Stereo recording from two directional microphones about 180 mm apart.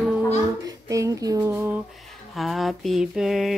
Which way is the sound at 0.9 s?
15° right (ahead or behind).